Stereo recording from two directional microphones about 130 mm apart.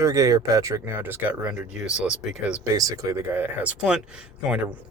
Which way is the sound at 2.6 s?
25° right (ahead or behind).